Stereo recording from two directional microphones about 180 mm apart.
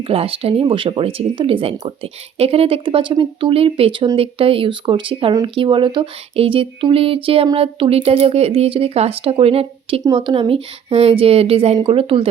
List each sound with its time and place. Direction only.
0.1 s speech: 30° right (ahead or behind)